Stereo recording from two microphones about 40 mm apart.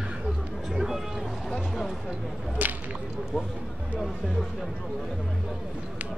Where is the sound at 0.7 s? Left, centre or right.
Centre.